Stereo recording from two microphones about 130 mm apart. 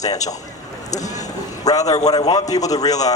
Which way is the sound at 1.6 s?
30° left (ahead or behind).